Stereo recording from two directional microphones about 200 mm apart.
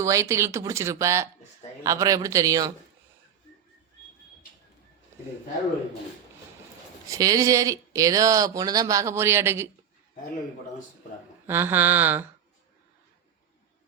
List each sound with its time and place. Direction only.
0.0 s speech: 15° right (ahead or behind)
7.1 s speech: 15° right (ahead or behind)
11.4 s speech: 10° right (ahead or behind)